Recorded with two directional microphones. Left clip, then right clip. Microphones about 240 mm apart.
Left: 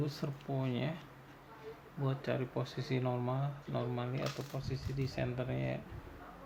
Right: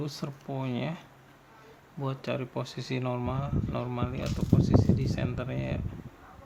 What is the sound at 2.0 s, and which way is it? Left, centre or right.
Speech, right.